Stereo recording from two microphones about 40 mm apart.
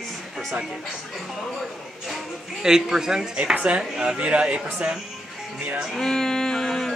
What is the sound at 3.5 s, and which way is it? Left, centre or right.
Speech, right.